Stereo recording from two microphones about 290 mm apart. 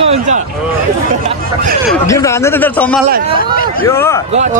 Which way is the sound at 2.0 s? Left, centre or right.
Centre.